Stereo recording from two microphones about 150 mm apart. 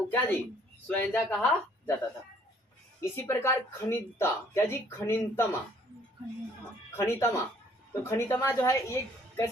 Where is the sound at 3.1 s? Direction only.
15° left (ahead or behind).